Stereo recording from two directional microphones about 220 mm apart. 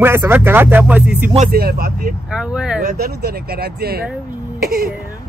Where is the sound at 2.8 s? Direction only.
45° right (ahead or behind).